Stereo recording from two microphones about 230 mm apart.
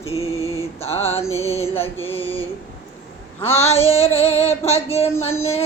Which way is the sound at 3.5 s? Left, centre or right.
Left.